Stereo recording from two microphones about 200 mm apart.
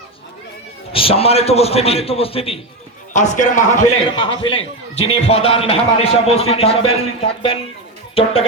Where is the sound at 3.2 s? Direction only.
40° left (ahead or behind).